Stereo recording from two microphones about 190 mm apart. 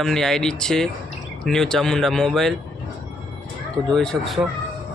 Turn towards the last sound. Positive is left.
turn(degrees=0)  # may be behind; listen again after turning